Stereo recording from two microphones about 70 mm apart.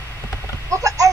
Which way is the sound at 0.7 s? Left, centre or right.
Right.